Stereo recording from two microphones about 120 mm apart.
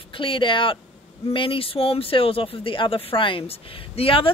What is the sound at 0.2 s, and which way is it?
Speech, 45° left (ahead or behind).